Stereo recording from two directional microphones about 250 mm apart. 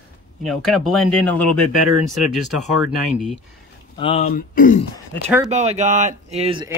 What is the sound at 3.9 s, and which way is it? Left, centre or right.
Speech, left.